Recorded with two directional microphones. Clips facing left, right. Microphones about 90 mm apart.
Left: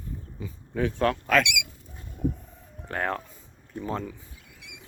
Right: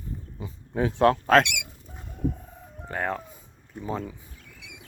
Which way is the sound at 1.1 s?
35° right (ahead or behind).